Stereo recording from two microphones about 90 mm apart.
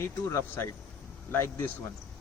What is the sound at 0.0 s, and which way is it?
A man's voice, 30° left (ahead or behind).